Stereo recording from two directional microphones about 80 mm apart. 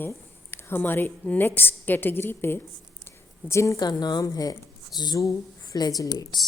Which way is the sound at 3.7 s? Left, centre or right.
Left.